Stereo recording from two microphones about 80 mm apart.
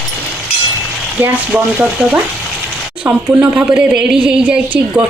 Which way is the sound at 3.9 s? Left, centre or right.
Centre.